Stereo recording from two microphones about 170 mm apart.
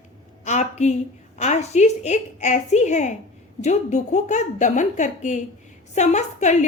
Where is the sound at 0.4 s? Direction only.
45° left (ahead or behind).